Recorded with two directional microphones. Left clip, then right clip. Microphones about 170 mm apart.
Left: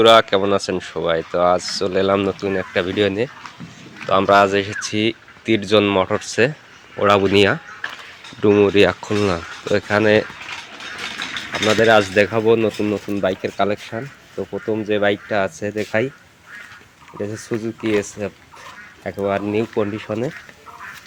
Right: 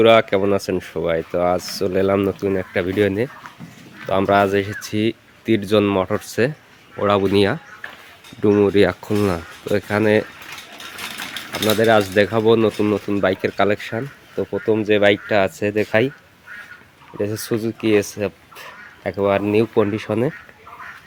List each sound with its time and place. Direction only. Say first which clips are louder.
0.0 s speech: left 1 dB; 35° right (ahead or behind)
11.7 s speech: left 2 dB; 25° right (ahead or behind); by 16.0 s 50° right (ahead or behind)
17.2 s speech: right 3 dB; 40° right (ahead or behind)